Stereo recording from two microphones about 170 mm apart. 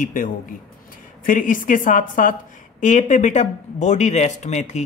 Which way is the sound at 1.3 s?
50° left (ahead or behind).